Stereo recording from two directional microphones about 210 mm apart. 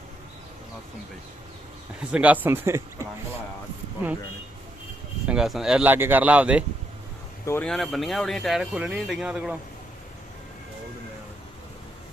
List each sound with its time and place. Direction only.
2.1 s speech: 5° right (ahead or behind)
5.3 s speech: centre (ahead or behind)
7.4 s speech: 10° left (ahead or behind)